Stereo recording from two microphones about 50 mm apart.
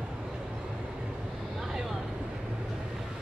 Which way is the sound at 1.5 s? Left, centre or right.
Centre.